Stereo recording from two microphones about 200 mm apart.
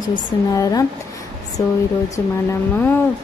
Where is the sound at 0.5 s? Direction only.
15° left (ahead or behind).